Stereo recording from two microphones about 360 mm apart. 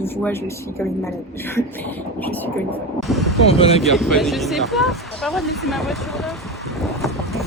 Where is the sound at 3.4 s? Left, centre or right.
Centre.